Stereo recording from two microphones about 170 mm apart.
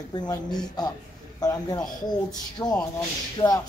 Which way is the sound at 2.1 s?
25° left (ahead or behind).